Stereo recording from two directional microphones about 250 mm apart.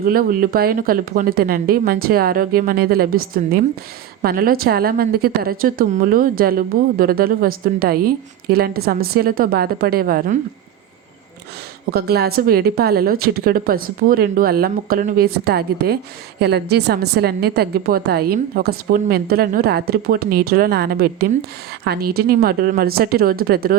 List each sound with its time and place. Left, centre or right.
0.0 s a woman's voice: right
11.9 s a woman's voice: right